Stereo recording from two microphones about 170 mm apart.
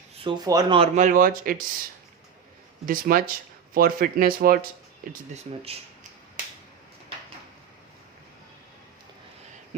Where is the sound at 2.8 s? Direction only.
55° right (ahead or behind).